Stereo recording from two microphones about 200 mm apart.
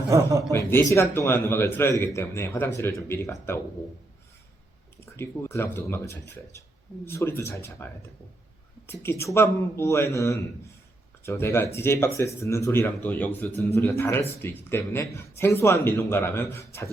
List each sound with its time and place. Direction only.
0.1 s a man's voice: 15° right (ahead or behind)
0.9 s a man's voice: 15° left (ahead or behind)
5.1 s a man's voice: 10° left (ahead or behind)
8.9 s a man's voice: 10° left (ahead or behind)